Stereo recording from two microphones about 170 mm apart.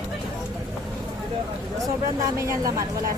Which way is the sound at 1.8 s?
20° right (ahead or behind).